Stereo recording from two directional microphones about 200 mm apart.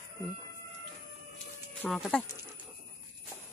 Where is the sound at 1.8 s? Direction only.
5° left (ahead or behind).